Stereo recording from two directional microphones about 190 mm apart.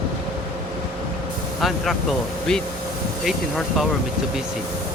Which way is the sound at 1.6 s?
Centre (ahead or behind).